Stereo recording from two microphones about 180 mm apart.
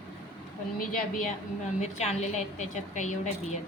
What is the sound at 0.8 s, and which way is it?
Speech, 50° left (ahead or behind).